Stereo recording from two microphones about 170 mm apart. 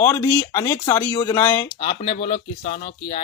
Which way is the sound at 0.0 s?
20° left (ahead or behind).